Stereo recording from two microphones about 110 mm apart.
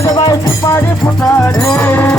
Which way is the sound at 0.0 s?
30° left (ahead or behind).